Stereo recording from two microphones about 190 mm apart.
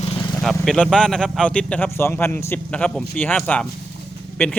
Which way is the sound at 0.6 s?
5° left (ahead or behind).